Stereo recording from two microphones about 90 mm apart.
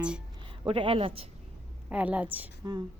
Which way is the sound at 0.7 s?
85° right.